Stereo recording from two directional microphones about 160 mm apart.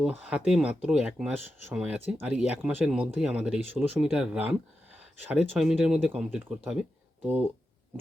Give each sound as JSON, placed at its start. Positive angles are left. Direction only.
{"t": 0.0, "sound": "speech", "side_deg": -5}